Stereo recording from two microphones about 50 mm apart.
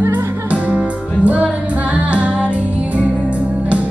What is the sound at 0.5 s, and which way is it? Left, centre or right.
Music, right.